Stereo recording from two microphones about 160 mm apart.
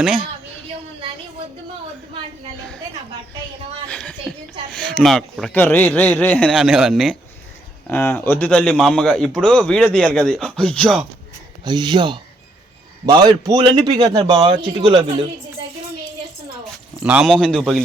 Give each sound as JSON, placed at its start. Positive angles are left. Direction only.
{"t": 3.8, "sound": "a sound", "side_deg": 5}
{"t": 4.7, "sound": "a man's voice", "side_deg": 5}
{"t": 6.5, "sound": "a man's voice", "side_deg": 0}
{"t": 7.9, "sound": "a man's voice", "side_deg": 10}
{"t": 11.6, "sound": "a man's voice", "side_deg": -25}
{"t": 17.0, "sound": "a man's voice", "side_deg": -5}